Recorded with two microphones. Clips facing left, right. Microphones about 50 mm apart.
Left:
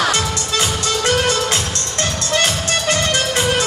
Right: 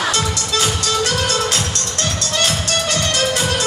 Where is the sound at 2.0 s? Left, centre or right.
Left.